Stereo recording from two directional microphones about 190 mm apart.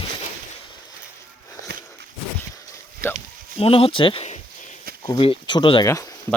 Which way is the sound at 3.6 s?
30° left (ahead or behind).